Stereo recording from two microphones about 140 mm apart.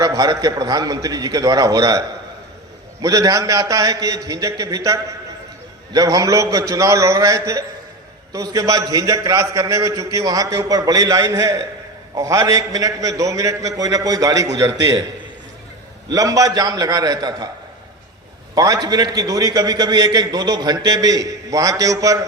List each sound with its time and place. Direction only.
0.0 s a man's voice: 25° right (ahead or behind)
16.1 s a man's voice: 25° right (ahead or behind)
18.5 s a man's voice: 25° right (ahead or behind)